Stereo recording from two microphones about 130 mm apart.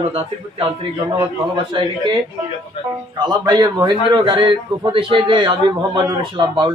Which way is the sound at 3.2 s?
30° right (ahead or behind).